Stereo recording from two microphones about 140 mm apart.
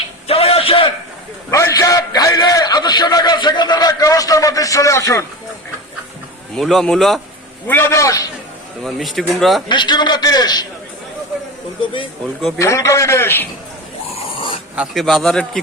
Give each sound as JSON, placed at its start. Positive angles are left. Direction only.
{"t": 0.3, "sound": "a sound", "side_deg": 45}
{"t": 1.5, "sound": "a sound", "side_deg": 20}
{"t": 6.6, "sound": "speech", "side_deg": 0}
{"t": 7.7, "sound": "a man's voice", "side_deg": 15}
{"t": 8.8, "sound": "speech", "side_deg": 0}
{"t": 9.6, "sound": "a man's voice", "side_deg": 35}
{"t": 12.5, "sound": "a man's voice", "side_deg": 20}
{"t": 14.3, "sound": "dog", "side_deg": 40}
{"t": 14.8, "sound": "speech", "side_deg": 0}